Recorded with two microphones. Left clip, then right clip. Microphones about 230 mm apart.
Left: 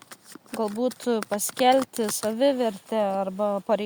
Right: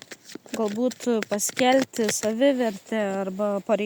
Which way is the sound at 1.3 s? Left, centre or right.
Left.